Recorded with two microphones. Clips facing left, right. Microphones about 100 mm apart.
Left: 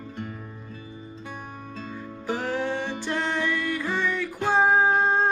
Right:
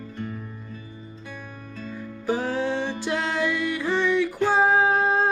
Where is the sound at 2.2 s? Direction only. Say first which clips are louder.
Right 3 dB; 15° right (ahead or behind).